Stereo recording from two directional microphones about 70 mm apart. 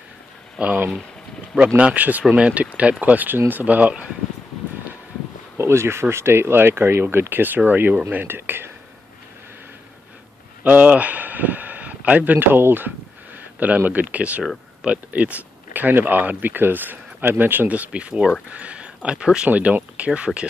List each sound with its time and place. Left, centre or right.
0.6 s speech: centre
1.8 s speech: right
5.6 s speech: right
10.6 s speech: right